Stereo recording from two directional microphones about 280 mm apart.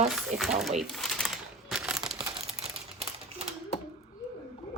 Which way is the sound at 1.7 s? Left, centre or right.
Centre.